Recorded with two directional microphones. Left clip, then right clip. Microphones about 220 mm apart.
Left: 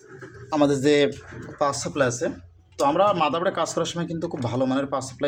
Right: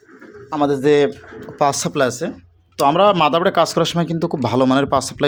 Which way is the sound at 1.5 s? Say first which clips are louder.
Right 6 dB; 40° right (ahead or behind).